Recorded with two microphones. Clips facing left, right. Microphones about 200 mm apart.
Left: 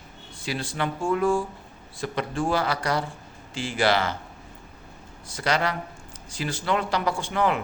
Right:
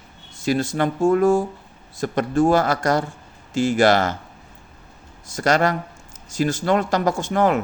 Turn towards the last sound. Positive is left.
turn(degrees=-45)  # may be behind; listen again after turning